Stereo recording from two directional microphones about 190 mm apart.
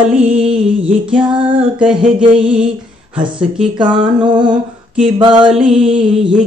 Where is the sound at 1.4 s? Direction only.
25° right (ahead or behind).